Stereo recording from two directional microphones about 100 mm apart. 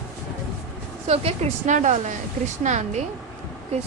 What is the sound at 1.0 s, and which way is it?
Speech, 90° right.